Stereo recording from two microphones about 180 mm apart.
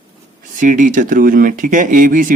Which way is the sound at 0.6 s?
45° right (ahead or behind).